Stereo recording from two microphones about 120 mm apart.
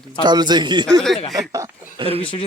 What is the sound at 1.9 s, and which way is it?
Speech, 50° right (ahead or behind).